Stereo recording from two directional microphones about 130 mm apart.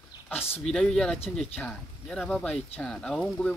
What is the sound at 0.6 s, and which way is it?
Speech, 5° left (ahead or behind).